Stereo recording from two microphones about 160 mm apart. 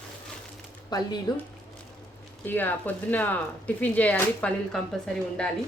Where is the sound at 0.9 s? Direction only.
25° left (ahead or behind).